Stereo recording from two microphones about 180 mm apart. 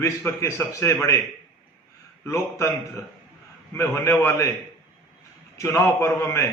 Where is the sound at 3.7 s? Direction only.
15° left (ahead or behind).